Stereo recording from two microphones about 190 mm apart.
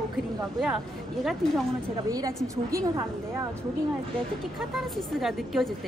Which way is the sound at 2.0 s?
20° right (ahead or behind).